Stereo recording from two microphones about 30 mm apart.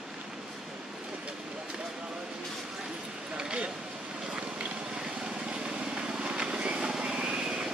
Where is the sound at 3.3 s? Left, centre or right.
Right.